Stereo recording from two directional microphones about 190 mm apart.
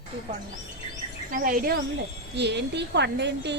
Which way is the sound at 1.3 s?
45° right (ahead or behind).